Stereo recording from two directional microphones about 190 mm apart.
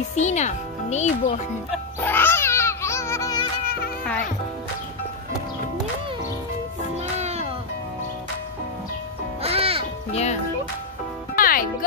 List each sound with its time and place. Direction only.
0.1 s speech: 40° left (ahead or behind)
2.0 s music: 10° left (ahead or behind)
7.0 s music: 35° right (ahead or behind)
9.4 s music: 30° right (ahead or behind)
10.1 s music: 35° left (ahead or behind)
11.3 s music: 50° left (ahead or behind)